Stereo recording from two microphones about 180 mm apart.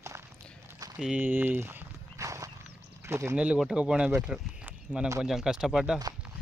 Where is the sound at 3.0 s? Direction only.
15° right (ahead or behind).